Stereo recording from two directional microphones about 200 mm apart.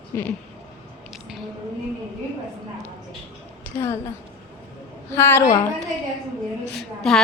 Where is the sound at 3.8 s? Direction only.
15° left (ahead or behind).